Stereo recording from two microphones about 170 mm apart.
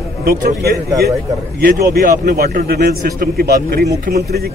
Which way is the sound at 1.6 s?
70° right (ahead or behind).